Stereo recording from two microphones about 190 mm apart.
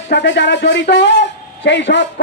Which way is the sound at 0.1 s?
65° left (ahead or behind).